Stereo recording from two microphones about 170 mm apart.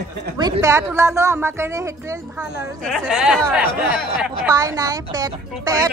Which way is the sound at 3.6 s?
60° left (ahead or behind).